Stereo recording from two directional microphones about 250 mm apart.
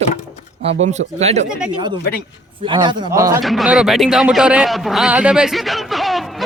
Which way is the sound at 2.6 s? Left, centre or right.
Centre.